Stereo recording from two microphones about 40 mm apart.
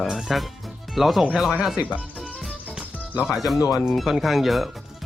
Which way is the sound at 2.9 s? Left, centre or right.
Left.